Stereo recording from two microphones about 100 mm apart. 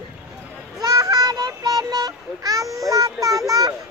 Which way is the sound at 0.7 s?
35° right (ahead or behind).